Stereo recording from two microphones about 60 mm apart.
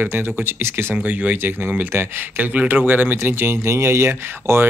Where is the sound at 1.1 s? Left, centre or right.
Right.